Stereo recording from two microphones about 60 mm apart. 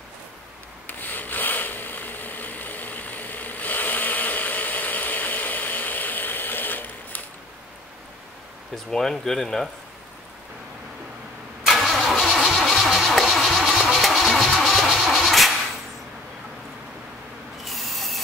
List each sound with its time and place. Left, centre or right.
0.8 s a sound: left
8.7 s speech: centre
11.6 s vehicle: centre
14.9 s music: centre
17.6 s rub: centre